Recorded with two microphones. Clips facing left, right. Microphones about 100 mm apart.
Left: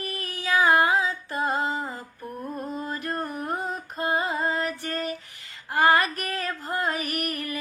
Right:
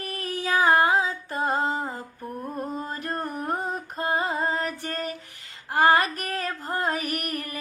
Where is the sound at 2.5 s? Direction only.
35° right (ahead or behind).